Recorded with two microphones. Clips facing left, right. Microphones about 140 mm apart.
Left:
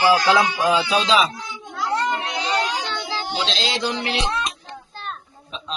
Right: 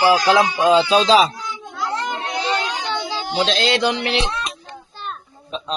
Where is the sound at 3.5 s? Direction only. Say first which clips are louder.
Right 6 dB; 60° right (ahead or behind).